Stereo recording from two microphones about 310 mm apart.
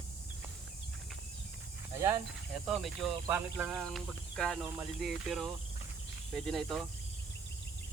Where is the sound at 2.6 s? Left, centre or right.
Centre.